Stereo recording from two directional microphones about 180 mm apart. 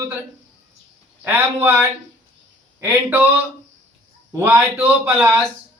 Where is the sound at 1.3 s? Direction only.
10° right (ahead or behind).